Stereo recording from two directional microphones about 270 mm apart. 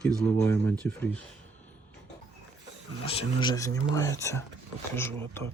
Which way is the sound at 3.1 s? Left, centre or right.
Centre.